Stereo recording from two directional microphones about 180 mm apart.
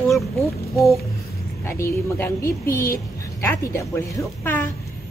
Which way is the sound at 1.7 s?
15° left (ahead or behind).